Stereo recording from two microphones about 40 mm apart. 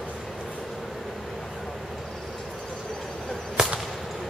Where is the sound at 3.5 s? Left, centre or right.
Centre.